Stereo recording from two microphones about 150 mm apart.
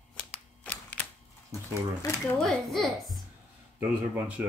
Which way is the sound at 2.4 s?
5° left (ahead or behind).